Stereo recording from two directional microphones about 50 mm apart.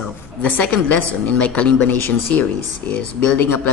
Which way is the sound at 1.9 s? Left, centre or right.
Left.